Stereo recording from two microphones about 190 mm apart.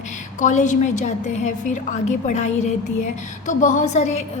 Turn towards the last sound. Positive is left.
turn(degrees=35)  # may be behind; listen again after turning